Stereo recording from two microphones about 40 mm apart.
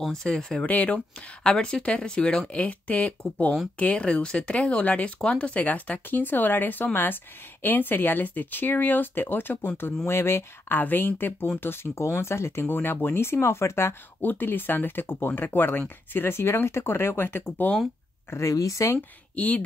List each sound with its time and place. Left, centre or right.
0.1 s speech: centre
0.7 s speech: left
1.4 s speech: centre
2.5 s speech: left
5.6 s speech: left
10.0 s speech: left
10.8 s speech: left
11.6 s speech: left
14.2 s speech: left
16.1 s speech: left
19.3 s speech: left